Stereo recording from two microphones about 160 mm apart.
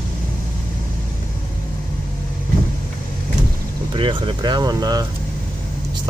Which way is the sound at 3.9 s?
30° right (ahead or behind).